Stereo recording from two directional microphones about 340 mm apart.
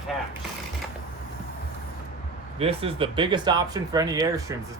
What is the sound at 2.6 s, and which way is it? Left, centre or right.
Speech, centre.